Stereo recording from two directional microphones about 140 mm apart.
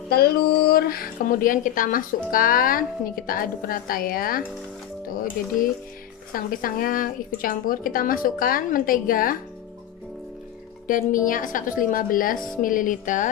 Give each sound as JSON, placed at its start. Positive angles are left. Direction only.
{"t": 0.1, "sound": "speech", "side_deg": 90}
{"t": 6.3, "sound": "speech", "side_deg": 90}
{"t": 10.9, "sound": "a woman's voice", "side_deg": 75}